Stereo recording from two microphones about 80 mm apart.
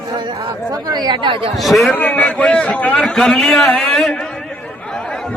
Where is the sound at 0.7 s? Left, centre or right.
Right.